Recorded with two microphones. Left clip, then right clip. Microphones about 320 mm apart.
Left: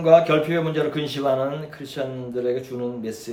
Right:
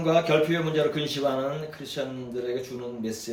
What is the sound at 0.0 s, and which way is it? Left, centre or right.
Speech, centre.